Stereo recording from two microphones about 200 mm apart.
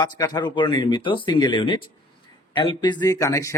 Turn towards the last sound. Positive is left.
turn(degrees=15)  # may be behind; listen again after turning